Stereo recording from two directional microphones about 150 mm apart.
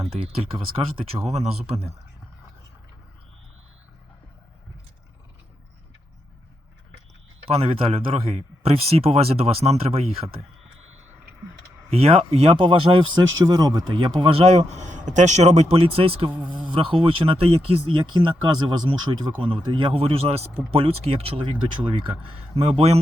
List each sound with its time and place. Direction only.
0.0 s a man's voice: 40° right (ahead or behind)
7.4 s a man's voice: 40° right (ahead or behind)
11.9 s speech: 40° right (ahead or behind)